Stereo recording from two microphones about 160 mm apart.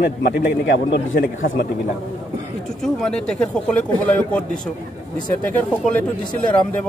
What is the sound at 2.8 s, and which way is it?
A man's voice, 5° left (ahead or behind).